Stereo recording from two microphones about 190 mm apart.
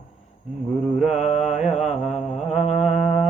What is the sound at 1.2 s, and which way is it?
Mantra, 35° left (ahead or behind).